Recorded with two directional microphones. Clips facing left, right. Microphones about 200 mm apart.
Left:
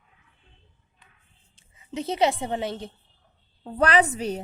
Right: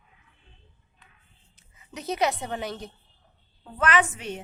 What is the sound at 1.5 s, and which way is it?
A woman's voice, 25° left (ahead or behind).